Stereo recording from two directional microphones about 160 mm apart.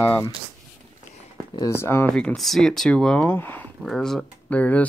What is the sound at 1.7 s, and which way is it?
Speech, 15° left (ahead or behind).